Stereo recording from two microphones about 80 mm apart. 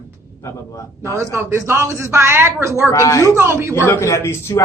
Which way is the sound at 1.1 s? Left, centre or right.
Right.